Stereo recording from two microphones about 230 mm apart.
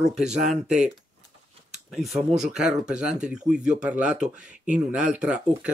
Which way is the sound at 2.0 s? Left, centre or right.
Centre.